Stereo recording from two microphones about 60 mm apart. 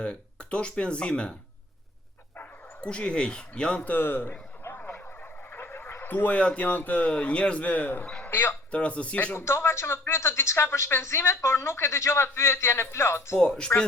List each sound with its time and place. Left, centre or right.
0.0 s speech: centre
2.8 s speech: centre
3.8 s a man's voice: left
8.3 s speech: left
8.7 s speech: left
9.3 s speech: left
13.4 s speech: centre